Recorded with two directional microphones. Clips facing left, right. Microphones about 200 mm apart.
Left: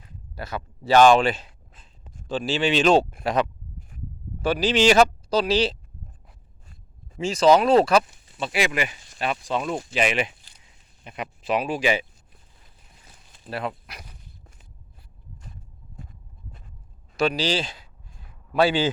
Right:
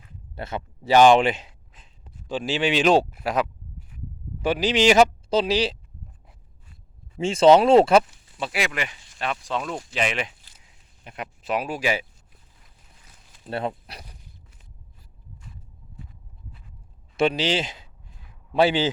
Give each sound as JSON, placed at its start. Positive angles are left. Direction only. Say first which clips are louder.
{"t": 0.3, "sound": "speech", "louder": "right 1 dB", "side_deg": -25}
{"t": 0.9, "sound": "a sound", "louder": "even", "side_deg": -20}
{"t": 2.2, "sound": "speech", "louder": "left 1 dB", "side_deg": -15}
{"t": 3.8, "sound": "a sound", "louder": "left 1 dB", "side_deg": 45}
{"t": 4.4, "sound": "speech", "louder": "even", "side_deg": -15}
{"t": 7.2, "sound": "speech", "louder": "right 2 dB", "side_deg": -30}
{"t": 8.4, "sound": "speech", "louder": "left 3 dB", "side_deg": 0}
{"t": 13.5, "sound": "speech", "louder": "right 2 dB", "side_deg": -30}
{"t": 17.2, "sound": "speech", "louder": "right 1 dB", "side_deg": -25}